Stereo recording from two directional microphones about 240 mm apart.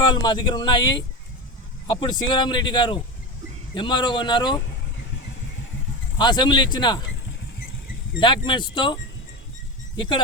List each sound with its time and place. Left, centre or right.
0.0 s speech: centre
2.0 s speech: centre
6.1 s speech: centre
8.2 s speech: centre